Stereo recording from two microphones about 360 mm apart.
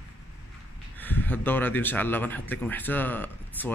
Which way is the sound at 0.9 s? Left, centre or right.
Centre.